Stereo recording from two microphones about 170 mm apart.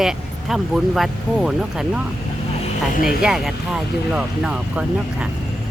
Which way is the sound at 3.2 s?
Centre (ahead or behind).